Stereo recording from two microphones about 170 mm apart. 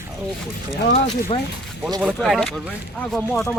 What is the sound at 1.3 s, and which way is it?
Speech, 35° left (ahead or behind).